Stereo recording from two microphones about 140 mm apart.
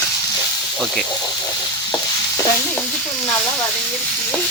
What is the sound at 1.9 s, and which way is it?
Stir, 30° left (ahead or behind).